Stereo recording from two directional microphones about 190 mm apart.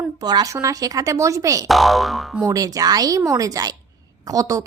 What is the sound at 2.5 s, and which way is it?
A woman's voice, 20° right (ahead or behind).